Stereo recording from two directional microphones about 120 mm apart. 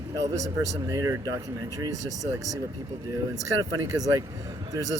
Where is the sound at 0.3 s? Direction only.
70° right (ahead or behind).